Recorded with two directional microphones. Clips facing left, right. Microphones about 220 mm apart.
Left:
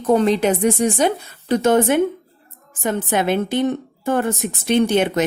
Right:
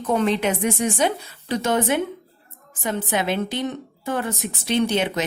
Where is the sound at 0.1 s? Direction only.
35° left (ahead or behind).